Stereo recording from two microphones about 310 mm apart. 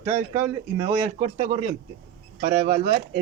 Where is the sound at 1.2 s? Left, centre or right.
Right.